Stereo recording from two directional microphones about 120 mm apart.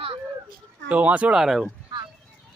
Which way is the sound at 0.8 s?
10° right (ahead or behind).